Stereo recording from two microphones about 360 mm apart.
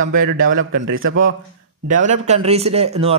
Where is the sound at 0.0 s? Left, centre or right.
Right.